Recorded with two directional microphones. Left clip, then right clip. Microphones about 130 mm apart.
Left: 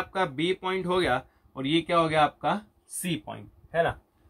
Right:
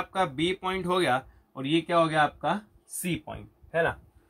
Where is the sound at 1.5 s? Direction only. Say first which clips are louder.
Left 1 dB; 25° right (ahead or behind).